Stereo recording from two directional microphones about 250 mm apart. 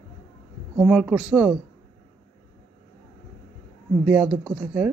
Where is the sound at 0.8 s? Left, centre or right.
Centre.